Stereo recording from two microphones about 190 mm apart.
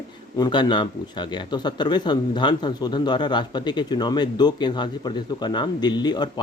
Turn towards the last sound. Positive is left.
turn(degrees=20)  # may be behind; listen again after turning